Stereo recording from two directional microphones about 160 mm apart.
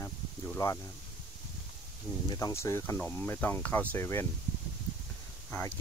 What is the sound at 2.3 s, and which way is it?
Speech, 20° left (ahead or behind).